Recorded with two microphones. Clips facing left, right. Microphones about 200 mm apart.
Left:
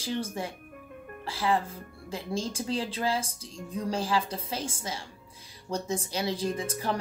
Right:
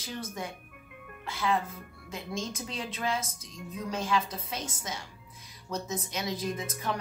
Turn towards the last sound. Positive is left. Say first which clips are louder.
# left 3 dB
turn(degrees=30)  # may be behind; listen again after turning